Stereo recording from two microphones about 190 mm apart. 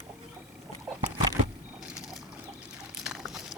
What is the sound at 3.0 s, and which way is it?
Pour, centre (ahead or behind).